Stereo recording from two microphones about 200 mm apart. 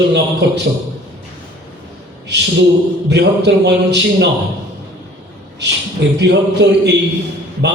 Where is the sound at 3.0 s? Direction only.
60° right (ahead or behind).